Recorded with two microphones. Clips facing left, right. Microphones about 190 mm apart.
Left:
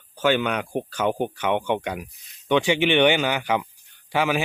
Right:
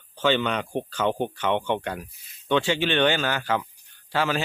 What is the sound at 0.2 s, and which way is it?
Speech, 10° left (ahead or behind).